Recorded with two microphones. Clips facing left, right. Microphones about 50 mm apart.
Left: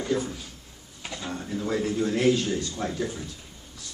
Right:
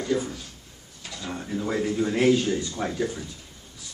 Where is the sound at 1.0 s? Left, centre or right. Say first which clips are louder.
Left 1 dB; left.